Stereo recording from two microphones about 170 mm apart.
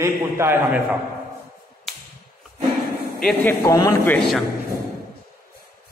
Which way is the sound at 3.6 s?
20° left (ahead or behind).